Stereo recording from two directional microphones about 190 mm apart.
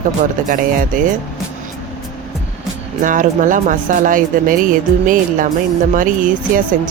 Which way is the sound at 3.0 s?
45° right (ahead or behind).